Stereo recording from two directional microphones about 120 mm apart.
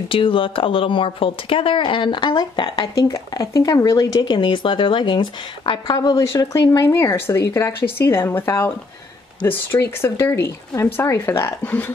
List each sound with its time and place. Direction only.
0.1 s speech: 45° left (ahead or behind)
2.9 s speech: 25° left (ahead or behind)